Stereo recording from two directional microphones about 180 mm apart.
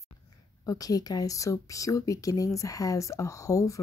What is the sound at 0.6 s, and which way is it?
Speech, 20° left (ahead or behind).